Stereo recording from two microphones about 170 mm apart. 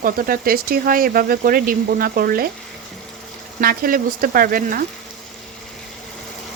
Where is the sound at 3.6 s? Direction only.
55° right (ahead or behind).